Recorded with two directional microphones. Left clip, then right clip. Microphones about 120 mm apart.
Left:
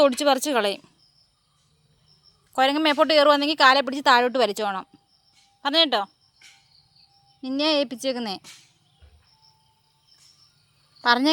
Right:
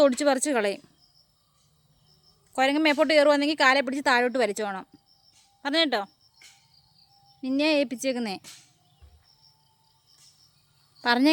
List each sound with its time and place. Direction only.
0.0 s a woman's voice: 20° right (ahead or behind)
2.5 s a woman's voice: 10° right (ahead or behind)
7.4 s a woman's voice: 20° right (ahead or behind)
11.0 s speech: 25° right (ahead or behind)